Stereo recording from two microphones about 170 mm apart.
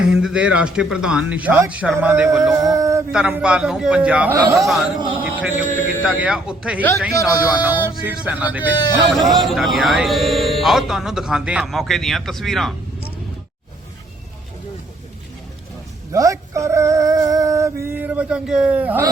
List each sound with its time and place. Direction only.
0.0 s speech: 5° right (ahead or behind)
2.7 s male singing: 20° right (ahead or behind)
3.1 s speech: 5° right (ahead or behind)
4.9 s speech: 30° right (ahead or behind)
5.2 s speech: 10° right (ahead or behind)
9.0 s speech: centre (ahead or behind)
16.1 s a sound: 20° right (ahead or behind)